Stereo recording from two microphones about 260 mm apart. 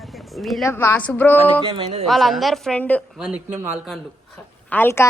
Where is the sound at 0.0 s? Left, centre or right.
Centre.